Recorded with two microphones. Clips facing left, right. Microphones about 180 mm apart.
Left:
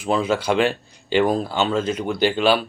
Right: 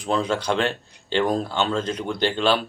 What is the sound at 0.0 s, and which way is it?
Speech, 5° left (ahead or behind).